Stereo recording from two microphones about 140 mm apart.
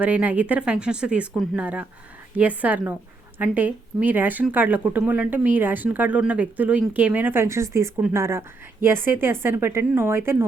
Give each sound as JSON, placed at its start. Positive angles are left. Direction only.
{"t": 0.0, "sound": "a woman's voice", "side_deg": -10}